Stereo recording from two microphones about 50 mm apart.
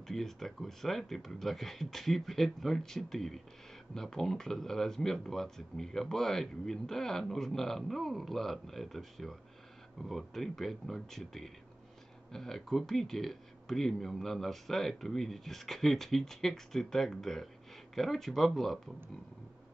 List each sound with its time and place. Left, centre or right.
0.0 s speech: centre